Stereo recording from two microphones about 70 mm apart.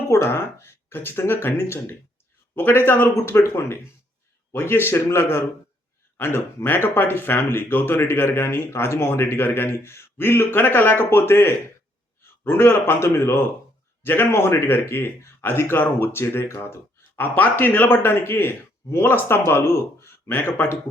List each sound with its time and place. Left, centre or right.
0.1 s speech: left